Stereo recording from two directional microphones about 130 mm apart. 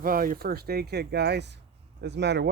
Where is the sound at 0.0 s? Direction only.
90° right.